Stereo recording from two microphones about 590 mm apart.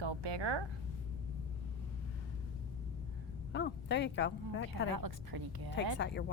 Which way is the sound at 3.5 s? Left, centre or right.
Centre.